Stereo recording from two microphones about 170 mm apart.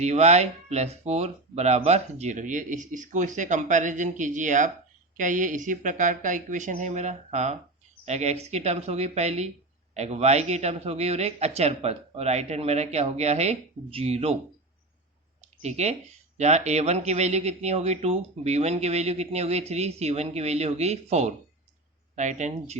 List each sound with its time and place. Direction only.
0.0 s speech: 40° right (ahead or behind)
15.6 s speech: 40° right (ahead or behind)